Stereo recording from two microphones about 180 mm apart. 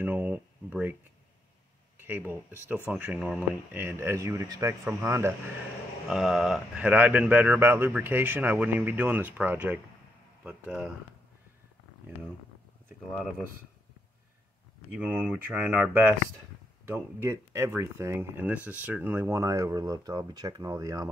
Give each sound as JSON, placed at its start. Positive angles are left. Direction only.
{"t": 0.0, "sound": "speech", "side_deg": -10}
{"t": 2.0, "sound": "speech", "side_deg": -10}
{"t": 6.0, "sound": "speech", "side_deg": 0}
{"t": 14.9, "sound": "speech", "side_deg": -5}